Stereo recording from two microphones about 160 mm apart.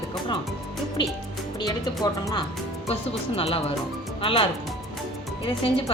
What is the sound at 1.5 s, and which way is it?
Speech, 25° left (ahead or behind).